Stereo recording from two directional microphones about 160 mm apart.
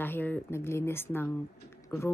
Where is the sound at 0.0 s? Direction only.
10° left (ahead or behind).